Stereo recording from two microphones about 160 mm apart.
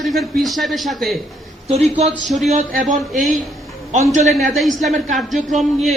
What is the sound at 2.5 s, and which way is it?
Speech, 55° right (ahead or behind).